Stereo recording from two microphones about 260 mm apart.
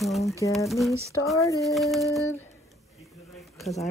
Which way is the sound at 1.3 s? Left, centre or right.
Centre.